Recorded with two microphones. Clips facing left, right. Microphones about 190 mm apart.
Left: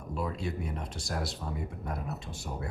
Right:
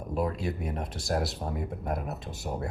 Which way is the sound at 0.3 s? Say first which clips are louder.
Right 3 dB; 45° right (ahead or behind).